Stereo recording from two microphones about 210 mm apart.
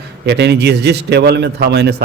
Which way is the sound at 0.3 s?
55° right (ahead or behind).